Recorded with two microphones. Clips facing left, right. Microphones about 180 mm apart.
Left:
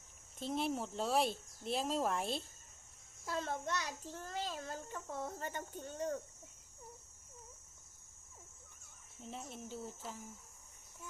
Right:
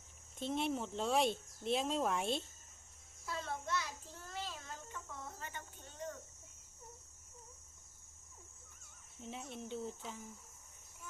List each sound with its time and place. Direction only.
0.3 s speech: centre (ahead or behind)
3.2 s a child's voice: 45° left (ahead or behind)
9.3 s speech: centre (ahead or behind)